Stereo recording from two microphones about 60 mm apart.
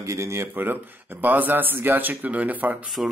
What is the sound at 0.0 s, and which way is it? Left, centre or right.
Speech, right.